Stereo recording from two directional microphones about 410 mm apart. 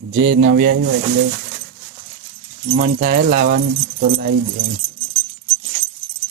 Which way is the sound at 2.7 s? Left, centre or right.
Right.